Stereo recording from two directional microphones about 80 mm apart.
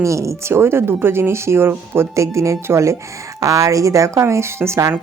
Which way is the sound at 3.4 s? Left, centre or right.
Right.